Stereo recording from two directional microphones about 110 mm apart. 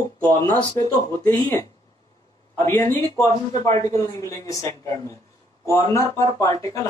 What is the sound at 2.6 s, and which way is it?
Speech, 20° left (ahead or behind).